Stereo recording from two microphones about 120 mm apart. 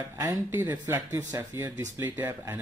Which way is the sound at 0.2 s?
20° right (ahead or behind).